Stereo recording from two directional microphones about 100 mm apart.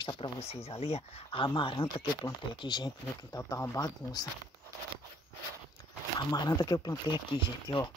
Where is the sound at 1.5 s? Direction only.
60° left (ahead or behind).